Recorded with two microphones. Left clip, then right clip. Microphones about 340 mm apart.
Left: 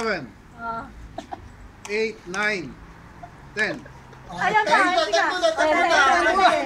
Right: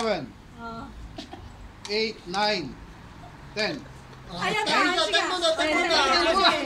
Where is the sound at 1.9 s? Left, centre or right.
Centre.